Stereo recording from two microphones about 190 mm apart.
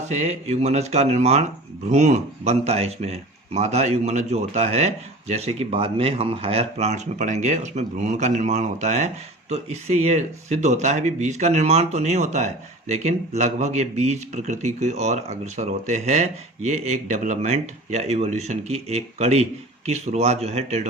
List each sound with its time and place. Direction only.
0.1 s speech: 35° right (ahead or behind)